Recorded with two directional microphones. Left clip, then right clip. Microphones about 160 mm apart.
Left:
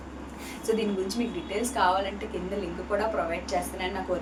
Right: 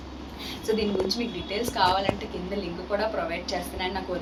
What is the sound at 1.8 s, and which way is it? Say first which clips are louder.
Speech: right 1 dB; 5° left (ahead or behind).